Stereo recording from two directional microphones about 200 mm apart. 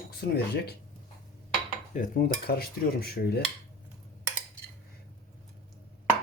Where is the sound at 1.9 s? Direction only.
45° left (ahead or behind).